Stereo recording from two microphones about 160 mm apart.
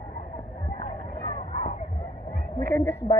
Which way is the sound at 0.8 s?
50° left (ahead or behind).